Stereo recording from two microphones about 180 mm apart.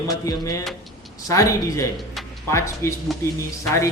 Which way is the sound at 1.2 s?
20° left (ahead or behind).